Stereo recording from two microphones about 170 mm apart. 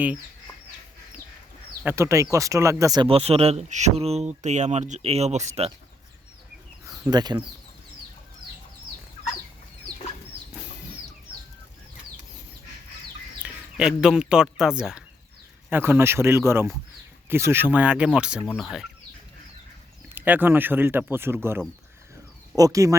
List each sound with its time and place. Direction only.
1.8 s speech: 15° right (ahead or behind)
3.1 s speech: 35° right (ahead or behind)
6.8 s speech: 20° right (ahead or behind)
13.4 s speech: 5° right (ahead or behind)
20.1 s speech: 10° right (ahead or behind)